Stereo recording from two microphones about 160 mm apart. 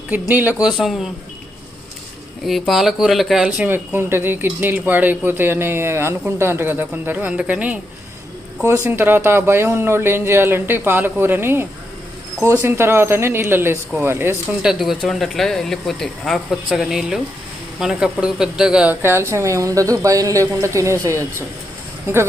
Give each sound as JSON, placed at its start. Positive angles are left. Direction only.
{"t": 0.1, "sound": "speech", "side_deg": -10}
{"t": 2.4, "sound": "speech", "side_deg": 0}
{"t": 14.7, "sound": "speech", "side_deg": 0}